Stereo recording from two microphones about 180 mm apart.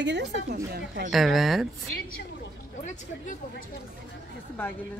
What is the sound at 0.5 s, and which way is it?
Speech, 50° right (ahead or behind).